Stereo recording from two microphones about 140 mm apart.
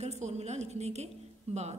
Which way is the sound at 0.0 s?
50° right (ahead or behind).